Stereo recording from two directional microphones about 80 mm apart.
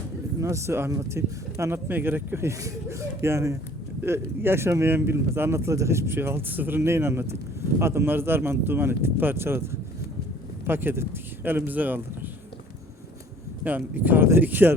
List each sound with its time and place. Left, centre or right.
0.3 s speech: right
1.9 s speech: right
10.7 s speech: right
13.7 s speech: right